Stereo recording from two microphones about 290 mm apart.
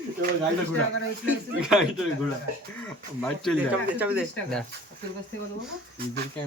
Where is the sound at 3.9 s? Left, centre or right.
Centre.